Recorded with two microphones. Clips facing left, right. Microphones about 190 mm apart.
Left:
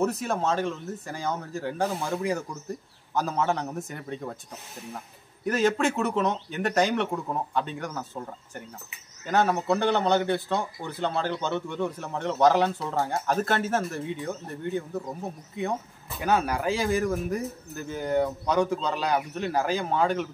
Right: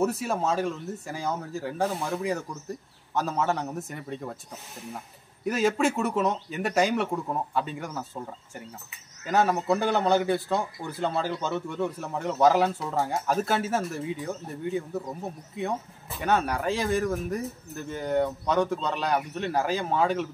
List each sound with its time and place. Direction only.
0.0 s a man's voice: 5° right (ahead or behind)
5.4 s a man's voice: 5° right (ahead or behind)
16.2 s a man's voice: centre (ahead or behind)